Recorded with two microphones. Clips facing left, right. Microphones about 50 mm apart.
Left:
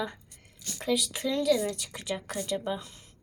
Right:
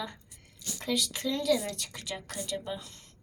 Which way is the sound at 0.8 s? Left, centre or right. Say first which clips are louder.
Left 3 dB; centre.